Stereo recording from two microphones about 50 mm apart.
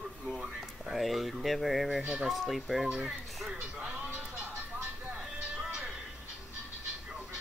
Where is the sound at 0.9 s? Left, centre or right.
Centre.